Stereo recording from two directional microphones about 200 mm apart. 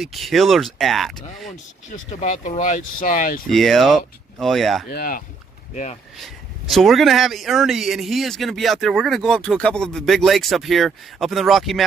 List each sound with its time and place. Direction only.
0.0 s speech: centre (ahead or behind)
1.9 s speech: 40° left (ahead or behind)
3.4 s speech: centre (ahead or behind)
4.8 s speech: 45° left (ahead or behind)
6.1 s speech: centre (ahead or behind)